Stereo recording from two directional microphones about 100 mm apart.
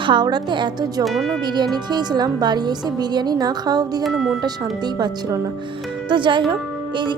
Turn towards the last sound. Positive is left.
turn(degrees=-55)  # may be behind; listen again after turning